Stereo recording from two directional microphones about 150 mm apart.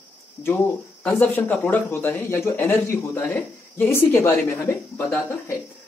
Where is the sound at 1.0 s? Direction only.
10° left (ahead or behind).